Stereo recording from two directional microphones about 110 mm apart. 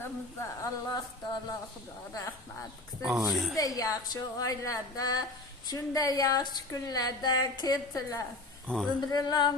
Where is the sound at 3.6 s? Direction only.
30° left (ahead or behind).